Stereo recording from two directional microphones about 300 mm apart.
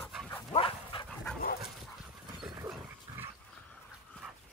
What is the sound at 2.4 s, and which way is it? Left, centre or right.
Dog, centre.